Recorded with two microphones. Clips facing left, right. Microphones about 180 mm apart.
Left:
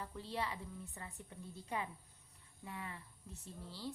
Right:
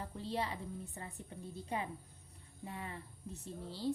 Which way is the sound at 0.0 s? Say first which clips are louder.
Right 3 dB; 30° right (ahead or behind).